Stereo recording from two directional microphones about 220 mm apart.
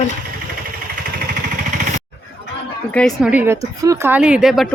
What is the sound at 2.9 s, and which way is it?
Speech, centre (ahead or behind).